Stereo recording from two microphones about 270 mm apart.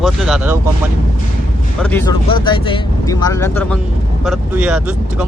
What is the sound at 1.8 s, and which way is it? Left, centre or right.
Speech, centre.